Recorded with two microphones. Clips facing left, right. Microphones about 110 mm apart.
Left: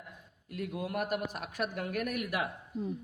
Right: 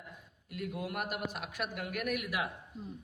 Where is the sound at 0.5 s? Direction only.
45° left (ahead or behind).